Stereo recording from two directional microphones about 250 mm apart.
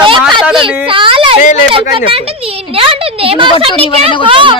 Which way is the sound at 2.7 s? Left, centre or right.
Right.